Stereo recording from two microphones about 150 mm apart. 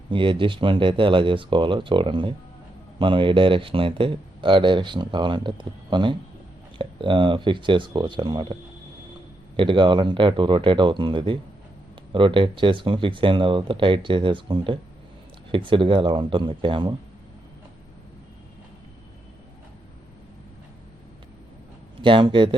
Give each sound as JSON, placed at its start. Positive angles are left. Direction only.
{"t": 0.1, "sound": "speech", "side_deg": -35}
{"t": 9.6, "sound": "speech", "side_deg": -35}
{"t": 22.0, "sound": "speech", "side_deg": -35}